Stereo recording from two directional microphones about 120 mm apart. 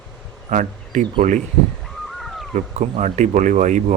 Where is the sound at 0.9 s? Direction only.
75° right (ahead or behind).